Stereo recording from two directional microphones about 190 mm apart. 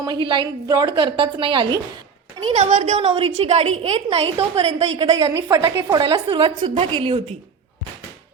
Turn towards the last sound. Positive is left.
turn(degrees=-30)  # may be behind; listen again after turning